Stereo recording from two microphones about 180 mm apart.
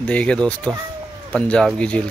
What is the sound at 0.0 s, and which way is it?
Speech, 5° left (ahead or behind).